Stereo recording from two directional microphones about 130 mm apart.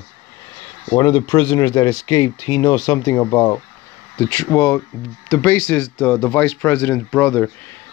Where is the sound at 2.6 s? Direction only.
20° left (ahead or behind).